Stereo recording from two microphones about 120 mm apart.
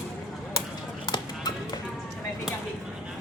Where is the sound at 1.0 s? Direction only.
35° left (ahead or behind).